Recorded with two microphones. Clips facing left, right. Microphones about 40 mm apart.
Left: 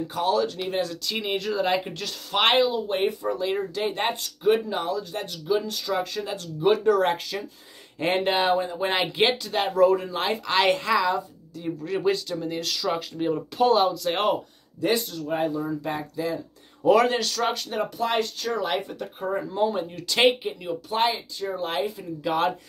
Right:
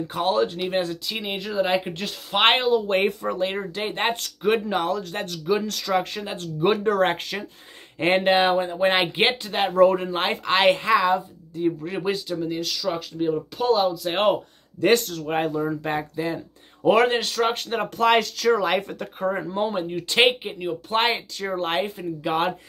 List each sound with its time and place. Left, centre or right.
0.1 s speech: right
1.1 s speech: centre; by 2.5 s right
2.7 s speech: right
3.3 s speech: right
4.2 s speech: right
8.0 s speech: right
12.4 s speech: centre
14.8 s speech: right
15.6 s speech: right
17.9 s speech: right
19.3 s speech: right
20.9 s speech: right
22.2 s speech: right